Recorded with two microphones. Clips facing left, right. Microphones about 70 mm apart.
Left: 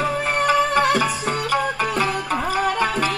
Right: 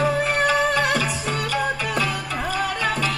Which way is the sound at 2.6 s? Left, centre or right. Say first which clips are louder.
Left 3 dB; left.